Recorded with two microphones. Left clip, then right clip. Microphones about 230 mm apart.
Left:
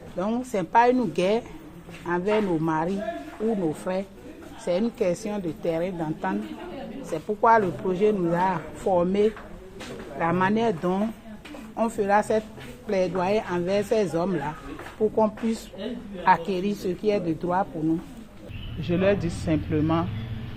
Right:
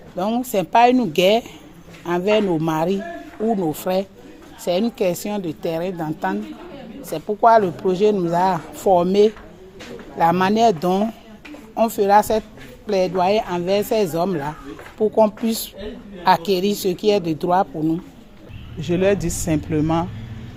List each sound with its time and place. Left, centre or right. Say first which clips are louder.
0.2 s a man's voice: right 6 dB; right
18.8 s a man's voice: right 5 dB; right